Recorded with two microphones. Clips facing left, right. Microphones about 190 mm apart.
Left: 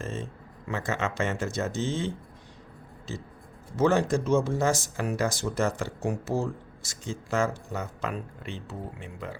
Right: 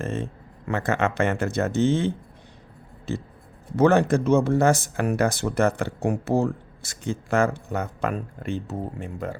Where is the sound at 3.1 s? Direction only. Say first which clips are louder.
Right 8 dB; 60° right (ahead or behind).